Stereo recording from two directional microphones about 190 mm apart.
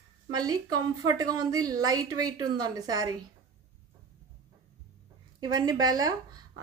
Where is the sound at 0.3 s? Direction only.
20° right (ahead or behind).